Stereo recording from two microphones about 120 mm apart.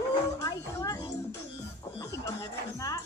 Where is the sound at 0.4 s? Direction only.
30° left (ahead or behind).